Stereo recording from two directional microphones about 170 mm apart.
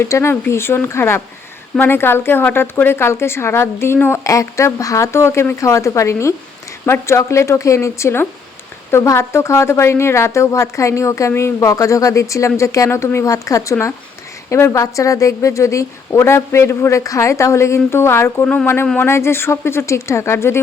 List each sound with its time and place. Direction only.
0.0 s speech: 15° left (ahead or behind)